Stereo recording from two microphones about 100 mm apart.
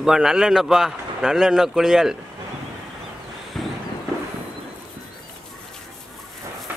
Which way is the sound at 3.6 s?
5° left (ahead or behind).